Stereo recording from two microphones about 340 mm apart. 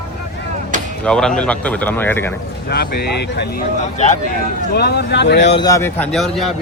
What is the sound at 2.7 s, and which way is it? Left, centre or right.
Speech, left.